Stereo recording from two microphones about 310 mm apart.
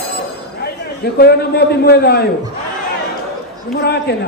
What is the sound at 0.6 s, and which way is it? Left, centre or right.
A man's voice, left.